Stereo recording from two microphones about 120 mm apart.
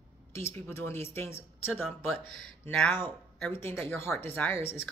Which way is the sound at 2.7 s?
10° left (ahead or behind).